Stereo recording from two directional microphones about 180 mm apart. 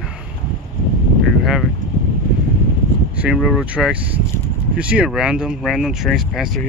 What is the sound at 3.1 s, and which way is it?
Speech, 5° right (ahead or behind).